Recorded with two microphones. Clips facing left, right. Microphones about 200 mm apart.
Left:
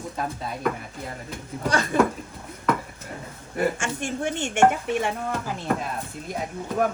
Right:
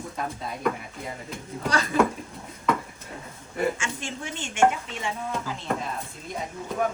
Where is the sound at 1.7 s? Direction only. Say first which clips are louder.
Left 2 dB; 50° left (ahead or behind).